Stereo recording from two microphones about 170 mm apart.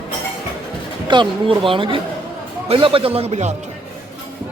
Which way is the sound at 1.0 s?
30° right (ahead or behind).